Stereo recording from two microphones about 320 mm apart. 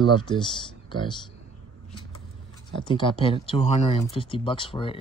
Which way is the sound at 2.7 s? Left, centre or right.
Centre.